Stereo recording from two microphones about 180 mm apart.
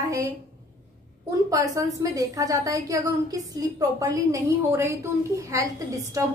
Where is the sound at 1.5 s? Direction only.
20° right (ahead or behind).